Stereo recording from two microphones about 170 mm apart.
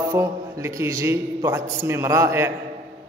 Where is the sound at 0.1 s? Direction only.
15° right (ahead or behind).